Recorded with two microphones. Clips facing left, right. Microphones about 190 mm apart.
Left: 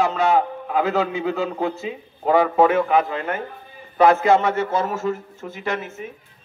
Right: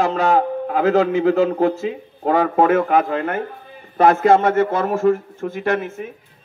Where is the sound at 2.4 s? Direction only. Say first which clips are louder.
Right 1 dB; 50° right (ahead or behind).